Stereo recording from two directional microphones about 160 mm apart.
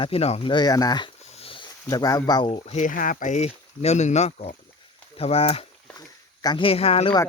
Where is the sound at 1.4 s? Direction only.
35° left (ahead or behind).